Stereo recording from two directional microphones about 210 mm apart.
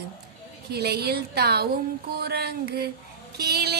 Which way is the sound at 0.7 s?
50° right (ahead or behind).